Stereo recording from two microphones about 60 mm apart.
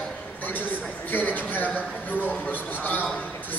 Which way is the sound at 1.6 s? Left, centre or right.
Right.